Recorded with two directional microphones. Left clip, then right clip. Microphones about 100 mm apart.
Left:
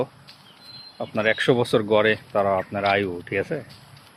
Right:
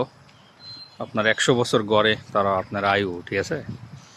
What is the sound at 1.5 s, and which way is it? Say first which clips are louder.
Speech: even; 20° right (ahead or behind).